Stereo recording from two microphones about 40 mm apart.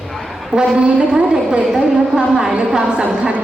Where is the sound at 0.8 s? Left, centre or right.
Right.